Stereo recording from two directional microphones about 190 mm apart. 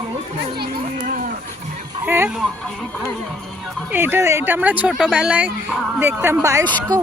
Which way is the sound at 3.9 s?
10° right (ahead or behind).